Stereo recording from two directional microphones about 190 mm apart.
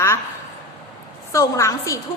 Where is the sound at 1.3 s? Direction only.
15° left (ahead or behind).